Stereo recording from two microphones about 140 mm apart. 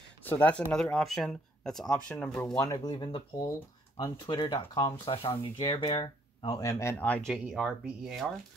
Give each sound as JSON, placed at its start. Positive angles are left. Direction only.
{"t": 0.2, "sound": "speech", "side_deg": 15}
{"t": 2.4, "sound": "speech", "side_deg": 25}
{"t": 7.2, "sound": "speech", "side_deg": 0}